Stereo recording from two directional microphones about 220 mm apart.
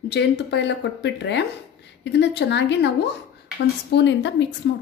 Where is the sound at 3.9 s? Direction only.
55° left (ahead or behind).